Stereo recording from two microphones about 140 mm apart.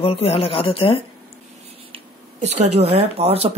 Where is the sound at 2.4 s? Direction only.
50° right (ahead or behind).